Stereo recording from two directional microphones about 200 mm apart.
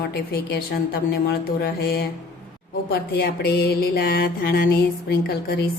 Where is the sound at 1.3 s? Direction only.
55° left (ahead or behind).